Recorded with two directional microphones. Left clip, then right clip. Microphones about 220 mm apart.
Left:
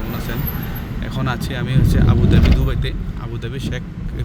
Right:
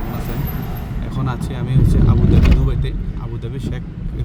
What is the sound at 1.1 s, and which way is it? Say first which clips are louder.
Speech: left 3 dB; 5° right (ahead or behind).